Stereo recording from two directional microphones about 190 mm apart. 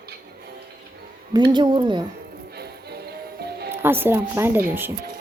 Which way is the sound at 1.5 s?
25° right (ahead or behind).